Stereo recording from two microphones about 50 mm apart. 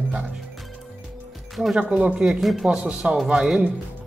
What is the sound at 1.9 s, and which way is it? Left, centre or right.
Speech, right.